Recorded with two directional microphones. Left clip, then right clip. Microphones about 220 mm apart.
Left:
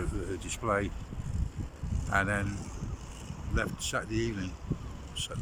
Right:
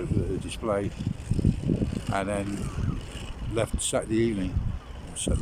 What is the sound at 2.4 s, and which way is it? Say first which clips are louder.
Speech: right 6 dB; 40° right (ahead or behind).